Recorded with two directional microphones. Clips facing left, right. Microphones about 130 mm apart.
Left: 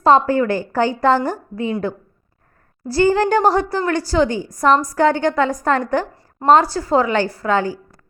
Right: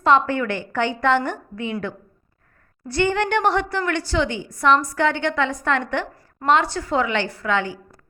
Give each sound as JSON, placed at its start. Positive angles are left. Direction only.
{"t": 0.0, "sound": "a woman's voice", "side_deg": 35}
{"t": 2.8, "sound": "a woman's voice", "side_deg": 35}